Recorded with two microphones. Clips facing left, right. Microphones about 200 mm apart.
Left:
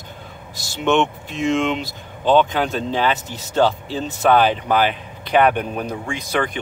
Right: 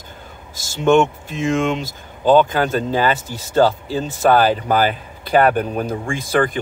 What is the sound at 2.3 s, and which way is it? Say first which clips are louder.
Speech: right 2 dB; 5° right (ahead or behind).